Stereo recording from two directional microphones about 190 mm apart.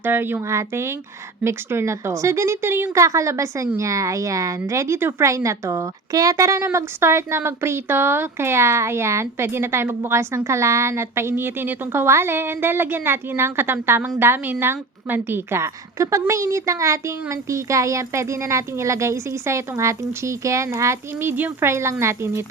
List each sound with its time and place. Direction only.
0.0 s a woman's voice: 10° right (ahead or behind)